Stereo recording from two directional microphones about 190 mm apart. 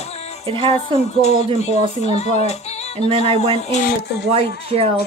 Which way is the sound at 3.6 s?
40° left (ahead or behind).